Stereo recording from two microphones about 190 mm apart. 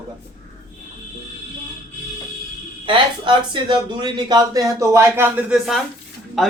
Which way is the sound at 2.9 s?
25° right (ahead or behind).